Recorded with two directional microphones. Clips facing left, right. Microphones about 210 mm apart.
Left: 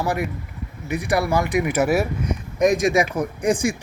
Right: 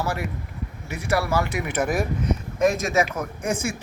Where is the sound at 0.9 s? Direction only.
15° left (ahead or behind).